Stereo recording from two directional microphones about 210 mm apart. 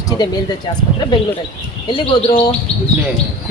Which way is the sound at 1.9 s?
25° left (ahead or behind).